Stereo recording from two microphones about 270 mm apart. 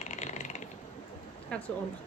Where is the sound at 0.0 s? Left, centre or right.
Left.